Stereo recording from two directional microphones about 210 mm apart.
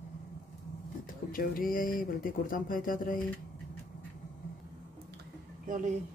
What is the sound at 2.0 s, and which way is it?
Speech, 40° left (ahead or behind).